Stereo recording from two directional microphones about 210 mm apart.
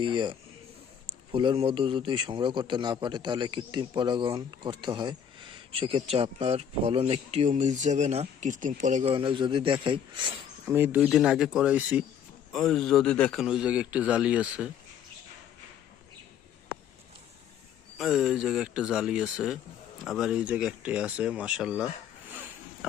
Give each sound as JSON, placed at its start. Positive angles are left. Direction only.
{"t": 0.0, "sound": "a man's voice", "side_deg": -20}
{"t": 10.7, "sound": "a man's voice", "side_deg": -10}
{"t": 17.9, "sound": "a man's voice", "side_deg": 0}
{"t": 22.3, "sound": "a sound", "side_deg": -10}